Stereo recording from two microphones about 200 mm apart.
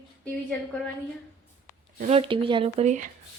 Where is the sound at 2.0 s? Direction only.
30° right (ahead or behind).